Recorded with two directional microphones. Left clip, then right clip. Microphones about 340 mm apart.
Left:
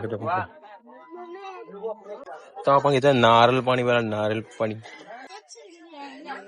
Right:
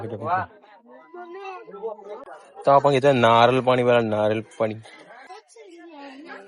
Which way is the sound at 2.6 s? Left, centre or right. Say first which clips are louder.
Right 2 dB; centre.